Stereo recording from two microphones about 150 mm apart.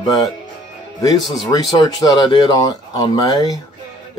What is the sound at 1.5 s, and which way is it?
Speech, 25° left (ahead or behind).